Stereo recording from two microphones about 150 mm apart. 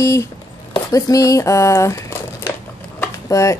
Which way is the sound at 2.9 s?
20° left (ahead or behind).